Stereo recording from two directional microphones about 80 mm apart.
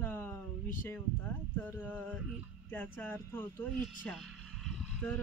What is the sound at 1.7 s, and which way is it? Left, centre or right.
Speech, left.